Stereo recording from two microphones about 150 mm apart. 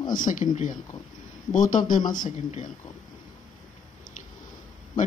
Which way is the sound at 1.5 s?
60° left (ahead or behind).